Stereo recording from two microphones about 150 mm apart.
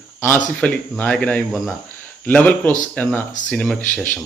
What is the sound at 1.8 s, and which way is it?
Speech, 15° left (ahead or behind).